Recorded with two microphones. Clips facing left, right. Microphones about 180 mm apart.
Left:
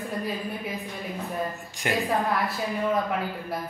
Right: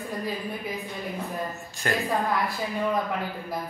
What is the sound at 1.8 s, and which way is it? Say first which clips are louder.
Speech: left 1 dB; 15° left (ahead or behind).